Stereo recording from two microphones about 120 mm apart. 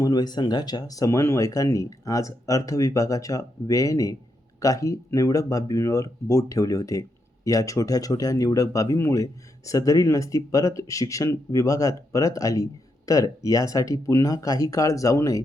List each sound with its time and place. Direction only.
0.0 s speech: 35° left (ahead or behind)